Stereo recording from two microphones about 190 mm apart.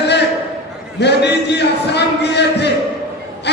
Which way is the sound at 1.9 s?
60° left (ahead or behind).